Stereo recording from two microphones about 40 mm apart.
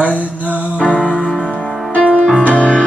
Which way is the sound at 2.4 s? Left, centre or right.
Left.